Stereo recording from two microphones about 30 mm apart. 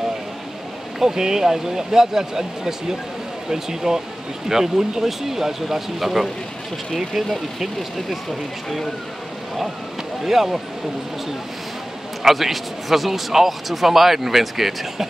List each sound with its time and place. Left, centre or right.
0.9 s speech: centre
10.2 s speech: centre
12.2 s speech: centre